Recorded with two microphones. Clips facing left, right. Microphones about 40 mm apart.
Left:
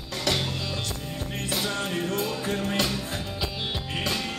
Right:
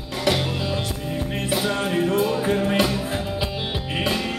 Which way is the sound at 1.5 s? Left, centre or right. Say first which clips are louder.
Right 5 dB; centre.